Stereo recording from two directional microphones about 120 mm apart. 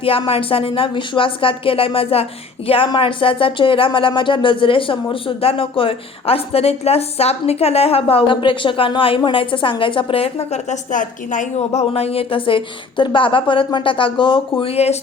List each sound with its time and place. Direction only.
0.0 s speech: 50° left (ahead or behind)
14.6 s speech: 60° left (ahead or behind)